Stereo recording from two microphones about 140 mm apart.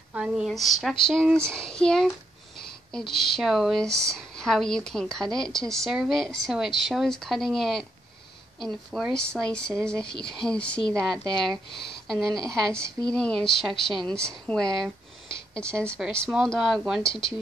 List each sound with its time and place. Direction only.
0.1 s speech: 5° right (ahead or behind)
10.0 s speech: 35° left (ahead or behind)
10.4 s a woman's voice: 5° left (ahead or behind)
16.0 s speech: 5° right (ahead or behind)